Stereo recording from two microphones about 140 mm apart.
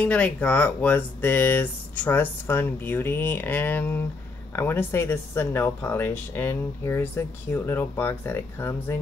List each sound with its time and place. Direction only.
0.0 s speech: 10° left (ahead or behind)